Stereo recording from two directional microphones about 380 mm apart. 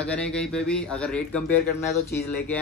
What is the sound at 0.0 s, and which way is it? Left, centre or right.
Speech, centre.